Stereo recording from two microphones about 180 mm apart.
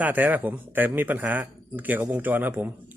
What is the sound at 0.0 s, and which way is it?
Speech, 10° right (ahead or behind).